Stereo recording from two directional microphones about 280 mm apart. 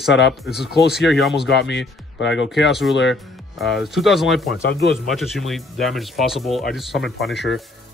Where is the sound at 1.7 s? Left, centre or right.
Left.